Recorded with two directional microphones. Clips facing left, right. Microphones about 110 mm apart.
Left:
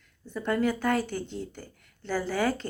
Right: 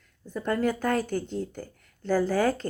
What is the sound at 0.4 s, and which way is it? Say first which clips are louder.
Speech: even; 40° right (ahead or behind).